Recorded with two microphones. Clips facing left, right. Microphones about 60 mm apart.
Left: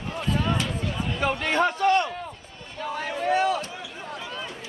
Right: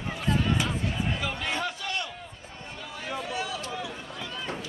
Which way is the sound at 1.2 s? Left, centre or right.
Left.